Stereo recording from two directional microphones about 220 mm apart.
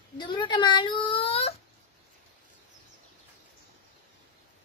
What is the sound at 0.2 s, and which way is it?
Whimper, 20° left (ahead or behind).